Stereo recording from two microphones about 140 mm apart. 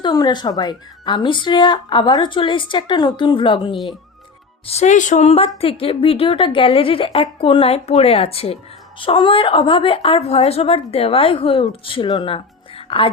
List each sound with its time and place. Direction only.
0.0 s a woman's voice: 30° left (ahead or behind)
4.6 s a woman's voice: 50° left (ahead or behind); by 12.4 s 35° left (ahead or behind)